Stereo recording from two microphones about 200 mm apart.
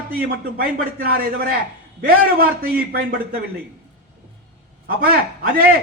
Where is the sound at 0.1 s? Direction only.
50° right (ahead or behind).